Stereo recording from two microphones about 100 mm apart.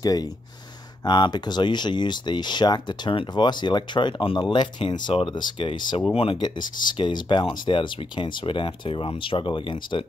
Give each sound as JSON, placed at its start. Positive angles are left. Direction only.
{"t": 0.0, "sound": "speech", "side_deg": 40}